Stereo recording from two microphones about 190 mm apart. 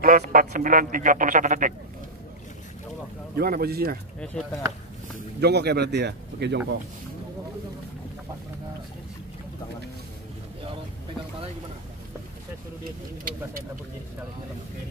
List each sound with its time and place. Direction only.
0.0 s speech: 45° right (ahead or behind)
3.3 s speech: 55° right (ahead or behind)
4.2 s speech: 5° left (ahead or behind)
5.4 s speech: 60° right (ahead or behind)
13.2 s speech: 45° right (ahead or behind)